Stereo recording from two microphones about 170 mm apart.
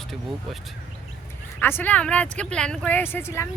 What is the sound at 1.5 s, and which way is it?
Speech, 10° left (ahead or behind).